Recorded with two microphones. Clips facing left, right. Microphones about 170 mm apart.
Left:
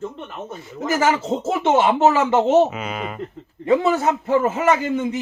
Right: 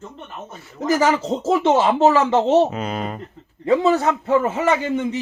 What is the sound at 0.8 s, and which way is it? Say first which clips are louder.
Speech: right 2 dB; 35° right (ahead or behind).